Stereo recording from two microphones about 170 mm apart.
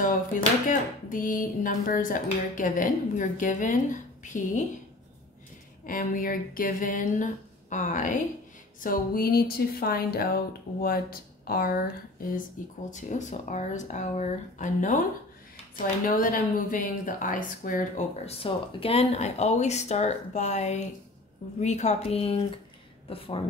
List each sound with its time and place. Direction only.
0.7 s speech: 50° left (ahead or behind)
5.9 s speech: 55° left (ahead or behind)
16.1 s speech: 50° left (ahead or behind)
18.2 s speech: 35° left (ahead or behind)